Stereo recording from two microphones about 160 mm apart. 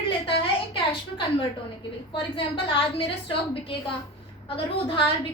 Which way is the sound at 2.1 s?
35° left (ahead or behind).